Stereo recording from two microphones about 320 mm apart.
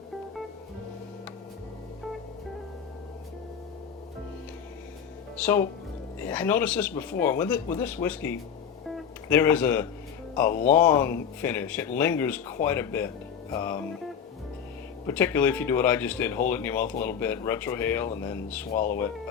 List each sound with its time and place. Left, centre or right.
5.4 s speech: centre
8.9 s guitar: centre
10.7 s speech: centre
15.0 s speech: centre
18.7 s speech: left